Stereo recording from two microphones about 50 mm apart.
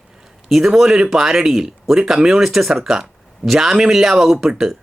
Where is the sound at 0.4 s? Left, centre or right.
Centre.